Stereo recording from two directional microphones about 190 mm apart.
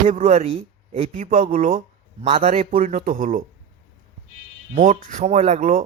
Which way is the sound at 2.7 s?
45° right (ahead or behind).